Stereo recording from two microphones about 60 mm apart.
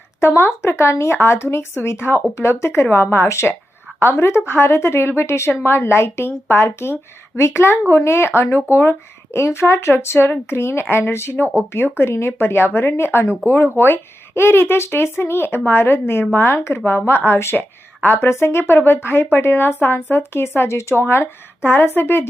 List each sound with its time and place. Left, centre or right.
0.2 s a woman's voice: left
21.1 s a woman's voice: left